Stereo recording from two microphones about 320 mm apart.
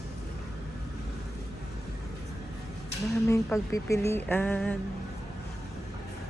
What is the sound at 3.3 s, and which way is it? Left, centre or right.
Speech, centre.